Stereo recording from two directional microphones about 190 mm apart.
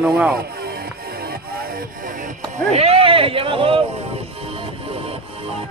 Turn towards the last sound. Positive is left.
turn(degrees=-30)  # may be behind; listen again after turning